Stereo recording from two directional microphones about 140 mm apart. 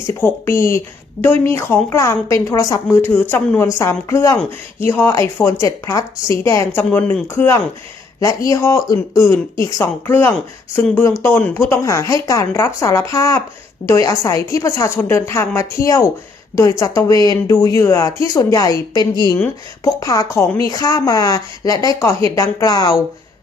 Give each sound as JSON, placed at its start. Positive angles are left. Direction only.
{"t": 0.1, "sound": "a woman's voice", "side_deg": 15}